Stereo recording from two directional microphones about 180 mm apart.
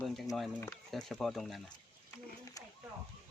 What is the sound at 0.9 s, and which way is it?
Speech, centre (ahead or behind).